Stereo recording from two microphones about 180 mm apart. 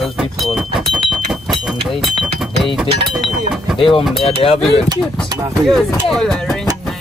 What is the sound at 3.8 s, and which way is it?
Speech, 30° left (ahead or behind).